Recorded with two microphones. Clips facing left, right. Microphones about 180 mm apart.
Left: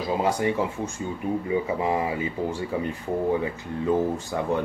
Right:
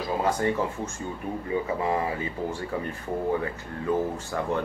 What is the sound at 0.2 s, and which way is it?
Speech, 15° left (ahead or behind).